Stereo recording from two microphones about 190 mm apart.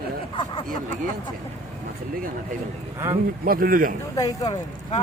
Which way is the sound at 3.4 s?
50° right (ahead or behind).